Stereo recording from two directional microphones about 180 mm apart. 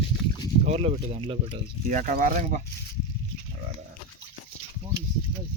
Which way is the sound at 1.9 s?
45° right (ahead or behind).